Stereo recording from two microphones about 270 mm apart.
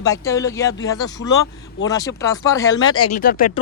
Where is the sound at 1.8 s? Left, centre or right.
Centre.